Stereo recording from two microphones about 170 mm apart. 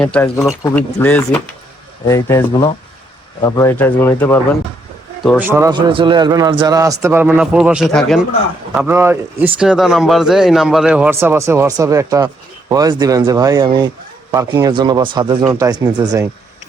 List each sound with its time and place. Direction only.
0.0 s speech: 5° left (ahead or behind)
5.4 s speech: 15° right (ahead or behind)
5.7 s a man's voice: 30° right (ahead or behind); by 8.2 s centre (ahead or behind)
8.7 s a man's voice: 10° right (ahead or behind)